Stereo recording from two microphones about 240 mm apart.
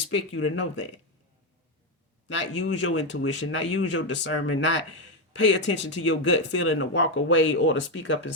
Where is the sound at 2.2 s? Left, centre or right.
Left.